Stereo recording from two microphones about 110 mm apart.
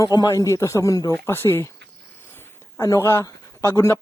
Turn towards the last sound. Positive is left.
turn(degrees=25)  # may be behind; listen again after turning